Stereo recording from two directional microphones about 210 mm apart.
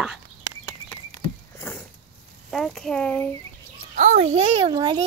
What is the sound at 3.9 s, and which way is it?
A child's voice, 35° right (ahead or behind).